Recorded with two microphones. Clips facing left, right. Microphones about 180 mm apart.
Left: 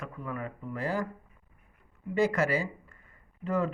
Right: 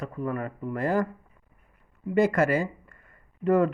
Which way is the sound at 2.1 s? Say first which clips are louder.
Right 4 dB; 55° right (ahead or behind).